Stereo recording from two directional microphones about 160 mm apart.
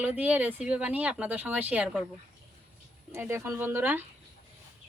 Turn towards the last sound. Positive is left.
turn(degrees=-15)  # may be behind; listen again after turning